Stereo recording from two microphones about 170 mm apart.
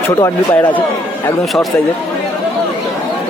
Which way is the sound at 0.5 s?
10° left (ahead or behind).